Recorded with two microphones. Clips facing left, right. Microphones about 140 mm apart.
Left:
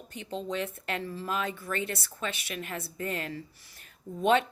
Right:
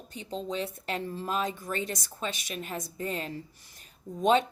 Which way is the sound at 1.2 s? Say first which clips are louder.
Right 2 dB; 35° right (ahead or behind).